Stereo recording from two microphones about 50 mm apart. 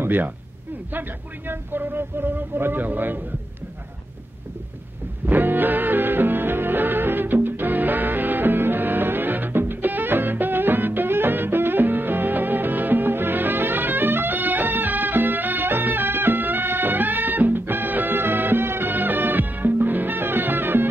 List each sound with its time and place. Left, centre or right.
0.0 s speech: right
1.5 s speech: right
5.2 s music: right